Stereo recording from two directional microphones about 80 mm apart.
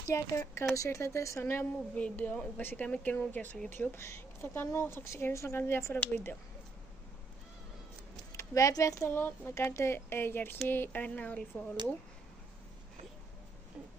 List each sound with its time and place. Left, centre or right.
0.1 s speech: left
2.0 s a woman's voice: centre
8.3 s a woman's voice: left; by 11.4 s centre